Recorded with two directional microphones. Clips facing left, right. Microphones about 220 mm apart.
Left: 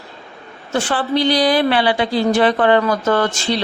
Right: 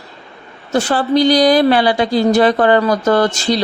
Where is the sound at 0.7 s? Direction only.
40° right (ahead or behind).